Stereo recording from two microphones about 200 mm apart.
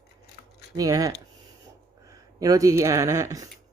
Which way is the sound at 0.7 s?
15° right (ahead or behind).